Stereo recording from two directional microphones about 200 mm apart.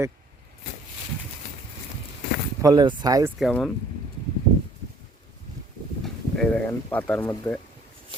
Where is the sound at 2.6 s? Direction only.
20° right (ahead or behind).